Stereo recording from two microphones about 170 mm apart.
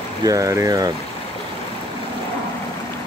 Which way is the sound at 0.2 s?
20° right (ahead or behind).